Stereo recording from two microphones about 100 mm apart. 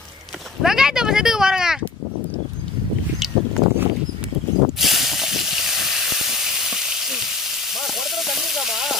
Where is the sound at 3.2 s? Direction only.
Centre (ahead or behind).